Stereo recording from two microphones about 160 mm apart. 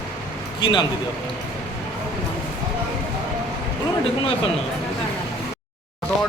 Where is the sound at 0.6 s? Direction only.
30° left (ahead or behind).